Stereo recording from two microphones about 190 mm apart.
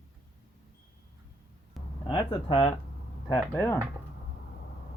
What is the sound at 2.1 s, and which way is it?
Speech, 25° left (ahead or behind).